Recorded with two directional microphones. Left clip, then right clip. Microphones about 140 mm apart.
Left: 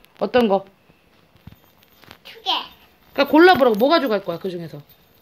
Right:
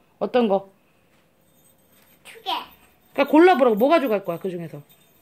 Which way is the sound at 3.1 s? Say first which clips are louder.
Left 2 dB; 20° right (ahead or behind).